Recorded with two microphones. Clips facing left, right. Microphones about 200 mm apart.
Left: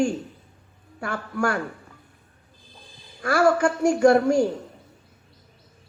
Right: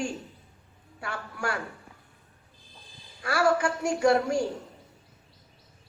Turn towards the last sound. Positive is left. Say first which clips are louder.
# left 6 dB
turn(degrees=50)  # may be behind; listen again after turning